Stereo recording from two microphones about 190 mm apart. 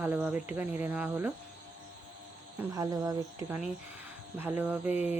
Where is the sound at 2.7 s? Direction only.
20° right (ahead or behind).